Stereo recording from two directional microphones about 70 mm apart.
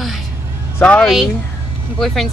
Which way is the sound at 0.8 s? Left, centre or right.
Centre.